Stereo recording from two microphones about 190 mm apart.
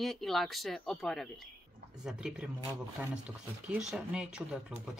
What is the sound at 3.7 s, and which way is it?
Speech, 5° right (ahead or behind).